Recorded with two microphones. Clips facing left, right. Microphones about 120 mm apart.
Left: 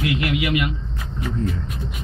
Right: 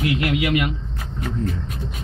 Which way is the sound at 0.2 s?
40° right (ahead or behind).